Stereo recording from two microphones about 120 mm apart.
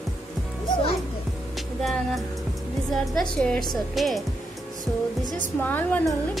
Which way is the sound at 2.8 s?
Centre (ahead or behind).